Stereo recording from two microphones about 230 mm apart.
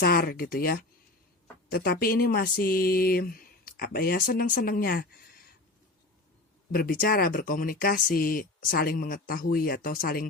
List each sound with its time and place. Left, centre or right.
0.0 s speech: left
6.7 s speech: left